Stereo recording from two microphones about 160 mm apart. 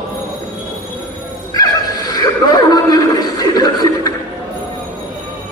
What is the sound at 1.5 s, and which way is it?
Neigh, 25° left (ahead or behind).